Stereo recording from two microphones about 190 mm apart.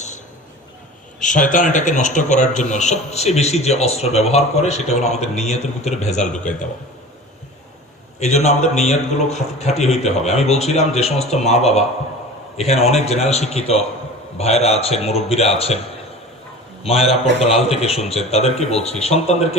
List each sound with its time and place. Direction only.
1.2 s a man's voice: 45° left (ahead or behind)
8.2 s a man's voice: 35° left (ahead or behind)
16.8 s a man's voice: 30° left (ahead or behind)